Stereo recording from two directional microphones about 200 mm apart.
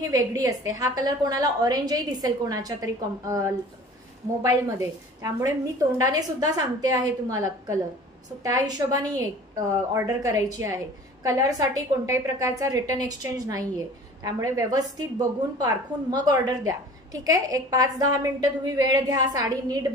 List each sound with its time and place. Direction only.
0.0 s a woman's voice: 15° right (ahead or behind)
5.9 s a woman's voice: 15° right (ahead or behind)